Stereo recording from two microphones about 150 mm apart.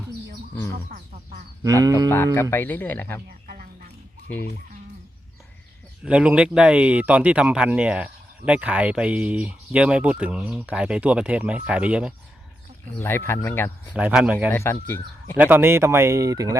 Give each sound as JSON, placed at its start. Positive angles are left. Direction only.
{"t": 0.7, "sound": "speech", "side_deg": -75}
{"t": 1.6, "sound": "speech", "side_deg": -20}
{"t": 2.0, "sound": "speech", "side_deg": 15}
{"t": 3.2, "sound": "a sound", "side_deg": -80}
{"t": 6.1, "sound": "speech", "side_deg": -5}
{"t": 13.0, "sound": "speech", "side_deg": 15}
{"t": 13.9, "sound": "speech", "side_deg": -5}
{"t": 14.5, "sound": "speech", "side_deg": 15}
{"t": 15.4, "sound": "speech", "side_deg": -15}